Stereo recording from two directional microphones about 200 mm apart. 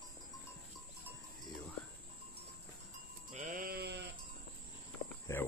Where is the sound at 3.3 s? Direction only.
40° right (ahead or behind).